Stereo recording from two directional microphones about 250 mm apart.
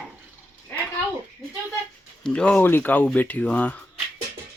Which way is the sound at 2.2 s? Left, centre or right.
Centre.